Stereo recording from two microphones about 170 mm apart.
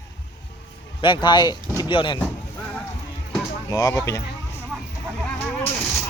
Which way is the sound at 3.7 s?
20° left (ahead or behind).